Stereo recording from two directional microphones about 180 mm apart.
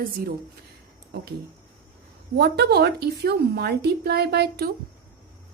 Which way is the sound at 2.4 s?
65° right (ahead or behind).